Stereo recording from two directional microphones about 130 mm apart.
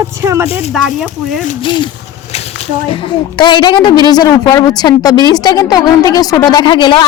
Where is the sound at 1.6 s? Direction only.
35° left (ahead or behind).